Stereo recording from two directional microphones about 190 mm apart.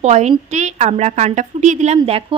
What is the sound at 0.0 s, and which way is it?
A woman's voice, 35° right (ahead or behind).